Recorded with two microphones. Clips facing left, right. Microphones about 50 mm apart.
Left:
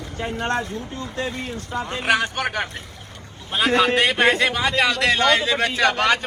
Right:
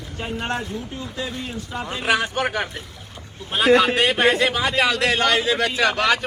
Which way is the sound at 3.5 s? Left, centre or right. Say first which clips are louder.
Right 4 dB; right.